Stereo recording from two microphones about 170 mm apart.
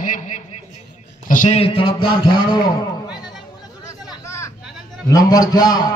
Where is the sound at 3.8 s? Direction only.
20° left (ahead or behind).